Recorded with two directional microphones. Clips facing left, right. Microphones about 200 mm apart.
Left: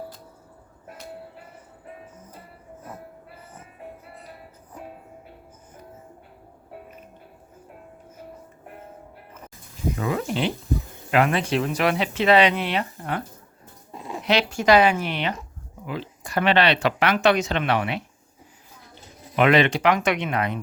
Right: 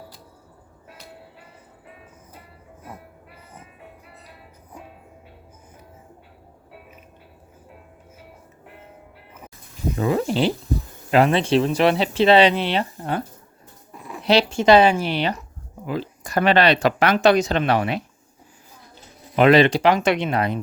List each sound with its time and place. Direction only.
9.9 s speech: 30° right (ahead or behind)
13.9 s a sound: 25° left (ahead or behind)
14.3 s speech: 30° right (ahead or behind)
19.4 s speech: 35° right (ahead or behind)